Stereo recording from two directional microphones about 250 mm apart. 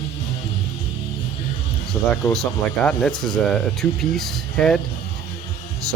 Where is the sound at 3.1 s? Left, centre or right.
Centre.